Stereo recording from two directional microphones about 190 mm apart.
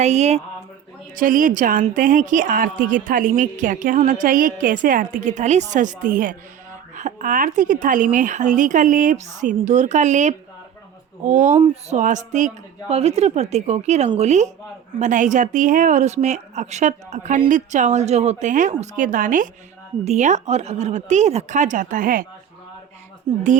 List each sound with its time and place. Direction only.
0.0 s a woman's voice: 35° right (ahead or behind)
23.3 s speech: 30° right (ahead or behind)